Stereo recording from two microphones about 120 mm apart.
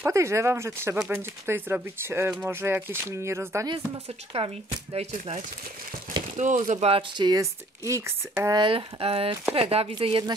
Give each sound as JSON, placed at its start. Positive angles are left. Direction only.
{"t": 0.0, "sound": "speech", "side_deg": -25}
{"t": 0.9, "sound": "speech", "side_deg": -10}
{"t": 4.3, "sound": "speech", "side_deg": -60}
{"t": 6.3, "sound": "speech", "side_deg": -90}
{"t": 6.9, "sound": "speech", "side_deg": -40}
{"t": 7.8, "sound": "speech", "side_deg": -25}
{"t": 8.5, "sound": "speech", "side_deg": -45}